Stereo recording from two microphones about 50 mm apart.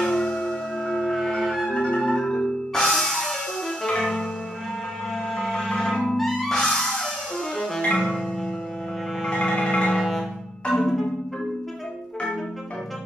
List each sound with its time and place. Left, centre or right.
0.0 s singing bowl: centre
1.1 s music: centre
1.6 s music: centre
5.3 s music: centre
9.3 s music: centre
10.7 s marimba: centre